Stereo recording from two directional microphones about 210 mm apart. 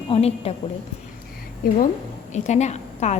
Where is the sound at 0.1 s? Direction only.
30° left (ahead or behind).